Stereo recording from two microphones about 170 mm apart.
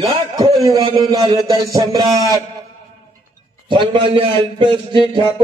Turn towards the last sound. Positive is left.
turn(degrees=-30)  # may be behind; listen again after turning